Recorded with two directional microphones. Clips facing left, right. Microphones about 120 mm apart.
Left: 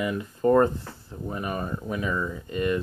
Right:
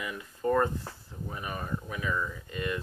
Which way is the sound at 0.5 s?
30° left (ahead or behind).